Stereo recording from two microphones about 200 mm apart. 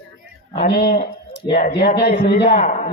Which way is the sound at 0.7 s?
50° left (ahead or behind).